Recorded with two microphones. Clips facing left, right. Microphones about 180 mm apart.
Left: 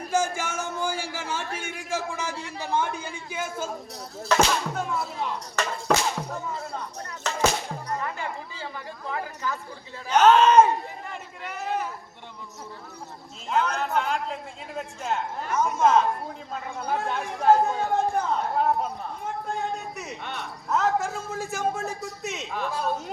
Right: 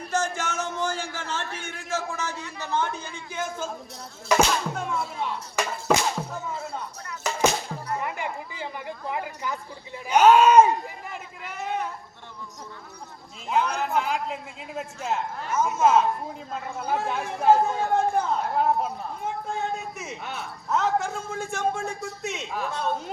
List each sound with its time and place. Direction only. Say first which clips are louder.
0.1 s a sound: left 1 dB; 10° left (ahead or behind)
2.6 s speech: left 1 dB; 10° left (ahead or behind)
4.3 s speech: right 1 dB; centre (ahead or behind)
5.5 s music: right 1 dB; 5° right (ahead or behind)
7.9 s chatter: right 2 dB; 15° right (ahead or behind)
10.1 s speech: right 1 dB; 10° right (ahead or behind)
11.1 s a sound: left 1 dB; centre (ahead or behind)
13.5 s a man's voice: right 1 dB; 5° right (ahead or behind)